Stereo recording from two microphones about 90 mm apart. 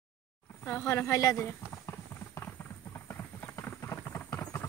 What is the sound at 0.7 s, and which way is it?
Speech, 25° left (ahead or behind).